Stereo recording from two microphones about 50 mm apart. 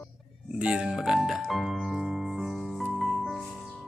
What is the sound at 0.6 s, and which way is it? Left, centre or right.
Speech, centre.